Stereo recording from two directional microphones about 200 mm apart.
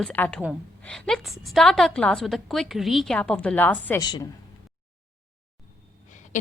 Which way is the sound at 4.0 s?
20° left (ahead or behind).